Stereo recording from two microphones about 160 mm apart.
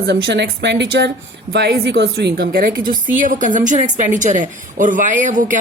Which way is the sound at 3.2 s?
55° right (ahead or behind).